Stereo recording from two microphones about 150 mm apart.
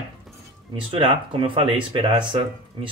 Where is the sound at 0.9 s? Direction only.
35° right (ahead or behind).